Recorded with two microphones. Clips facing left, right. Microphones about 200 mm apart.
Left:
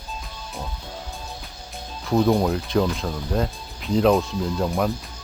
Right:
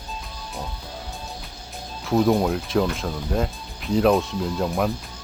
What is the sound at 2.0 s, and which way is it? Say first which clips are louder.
Speech: even; centre (ahead or behind).